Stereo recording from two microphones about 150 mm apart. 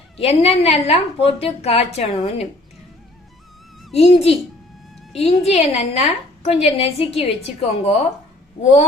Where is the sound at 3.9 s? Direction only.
45° left (ahead or behind).